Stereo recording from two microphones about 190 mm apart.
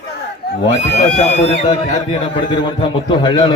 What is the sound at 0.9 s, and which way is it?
A man's voice, 35° left (ahead or behind).